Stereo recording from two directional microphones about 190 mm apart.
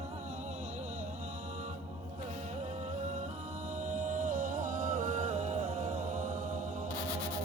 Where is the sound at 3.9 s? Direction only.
40° right (ahead or behind).